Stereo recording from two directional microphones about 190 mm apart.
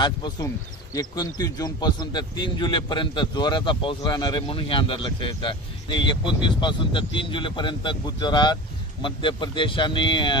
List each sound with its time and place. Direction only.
0.0 s speech: 25° left (ahead or behind)